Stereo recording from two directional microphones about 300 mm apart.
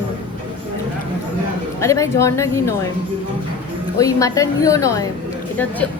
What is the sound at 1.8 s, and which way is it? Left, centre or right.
Speech, centre.